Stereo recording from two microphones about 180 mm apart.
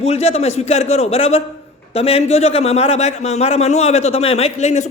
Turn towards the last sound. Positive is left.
turn(degrees=35)  # may be behind; listen again after turning